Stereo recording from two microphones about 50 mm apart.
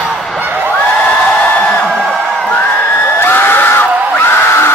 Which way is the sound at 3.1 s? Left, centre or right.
Left.